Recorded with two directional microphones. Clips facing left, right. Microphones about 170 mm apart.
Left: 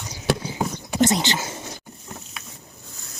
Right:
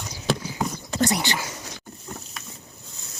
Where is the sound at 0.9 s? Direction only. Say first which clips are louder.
Left 4 dB; 20° left (ahead or behind).